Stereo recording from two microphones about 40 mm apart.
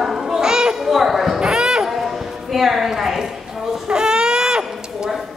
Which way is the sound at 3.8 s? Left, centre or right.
Centre.